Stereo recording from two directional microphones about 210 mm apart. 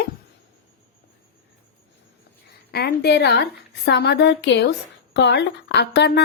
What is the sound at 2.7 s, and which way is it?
A woman's voice, 50° left (ahead or behind).